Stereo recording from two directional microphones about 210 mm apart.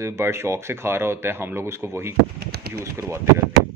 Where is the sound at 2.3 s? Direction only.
50° right (ahead or behind).